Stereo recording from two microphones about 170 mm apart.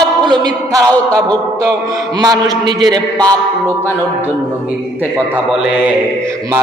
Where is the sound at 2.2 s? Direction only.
25° right (ahead or behind).